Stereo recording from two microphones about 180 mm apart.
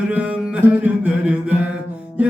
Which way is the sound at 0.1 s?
5° right (ahead or behind).